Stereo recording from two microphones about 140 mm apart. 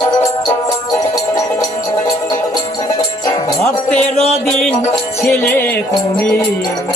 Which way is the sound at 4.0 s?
45° left (ahead or behind).